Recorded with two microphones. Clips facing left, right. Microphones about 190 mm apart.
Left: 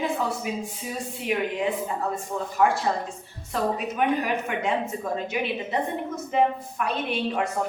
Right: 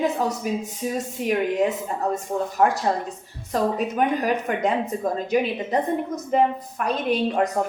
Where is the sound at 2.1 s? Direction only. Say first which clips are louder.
Right 3 dB; 40° right (ahead or behind).